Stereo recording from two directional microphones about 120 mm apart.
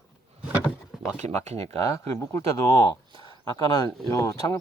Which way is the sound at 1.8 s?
25° left (ahead or behind).